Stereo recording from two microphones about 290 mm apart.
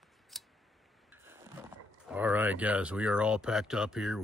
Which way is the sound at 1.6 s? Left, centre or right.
Centre.